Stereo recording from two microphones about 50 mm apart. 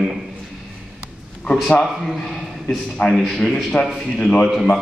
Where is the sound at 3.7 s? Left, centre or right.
Left.